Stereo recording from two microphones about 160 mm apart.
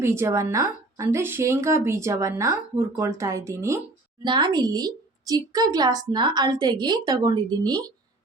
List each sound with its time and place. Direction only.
0.0 s a woman's voice: 15° right (ahead or behind)